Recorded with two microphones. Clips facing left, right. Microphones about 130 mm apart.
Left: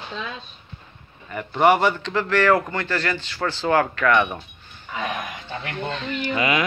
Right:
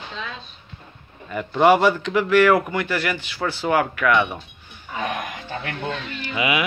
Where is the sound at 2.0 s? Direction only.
15° right (ahead or behind).